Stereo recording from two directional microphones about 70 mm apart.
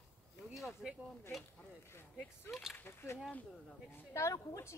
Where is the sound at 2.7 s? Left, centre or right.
Left.